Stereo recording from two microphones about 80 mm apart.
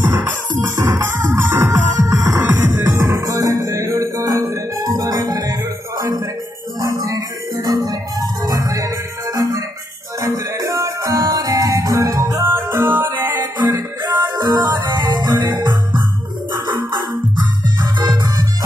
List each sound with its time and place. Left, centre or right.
0.0 s music: right
2.0 s music: right
2.6 s music: right
12.4 s music: right
13.7 s music: right
17.9 s music: right